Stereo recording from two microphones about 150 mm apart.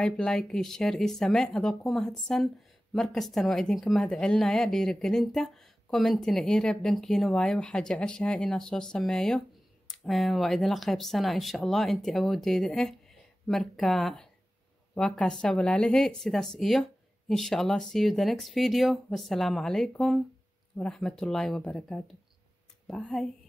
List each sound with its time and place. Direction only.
0.0 s speech: 5° left (ahead or behind)